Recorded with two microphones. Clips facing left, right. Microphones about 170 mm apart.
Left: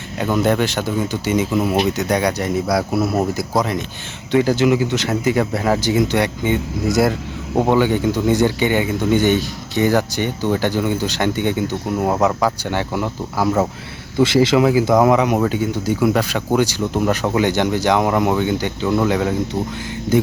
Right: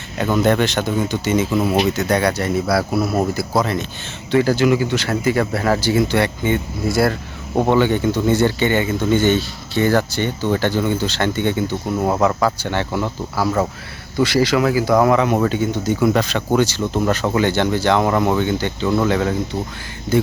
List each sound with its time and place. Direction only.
0.2 s speech: 10° left (ahead or behind)